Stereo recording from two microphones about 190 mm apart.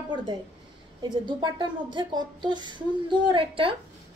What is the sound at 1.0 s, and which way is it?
A woman's voice, 25° right (ahead or behind).